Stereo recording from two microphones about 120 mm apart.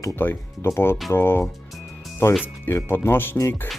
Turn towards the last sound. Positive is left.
turn(degrees=20)  # may be behind; listen again after turning